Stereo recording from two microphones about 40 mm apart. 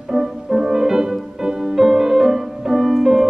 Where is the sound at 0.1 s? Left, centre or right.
Centre.